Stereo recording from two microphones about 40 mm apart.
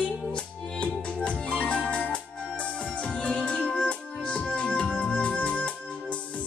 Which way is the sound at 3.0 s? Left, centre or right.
Left.